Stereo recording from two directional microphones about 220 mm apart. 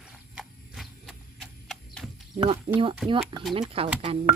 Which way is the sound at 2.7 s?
25° right (ahead or behind).